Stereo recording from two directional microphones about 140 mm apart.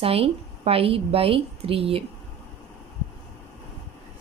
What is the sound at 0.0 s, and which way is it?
A woman's voice, 45° right (ahead or behind).